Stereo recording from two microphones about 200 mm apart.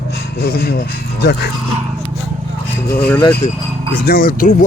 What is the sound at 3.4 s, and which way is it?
Speech, 35° left (ahead or behind).